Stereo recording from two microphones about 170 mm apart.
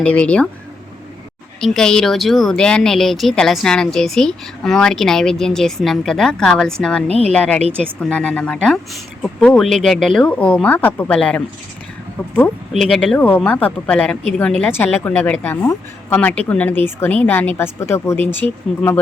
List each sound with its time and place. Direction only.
0.0 s a woman's voice: 5° left (ahead or behind)
1.6 s speech: centre (ahead or behind)
7.1 s speech: 35° right (ahead or behind)
7.3 s a woman's voice: 10° left (ahead or behind)
12.7 s speech: centre (ahead or behind)
13.1 s a woman's voice: 10° left (ahead or behind)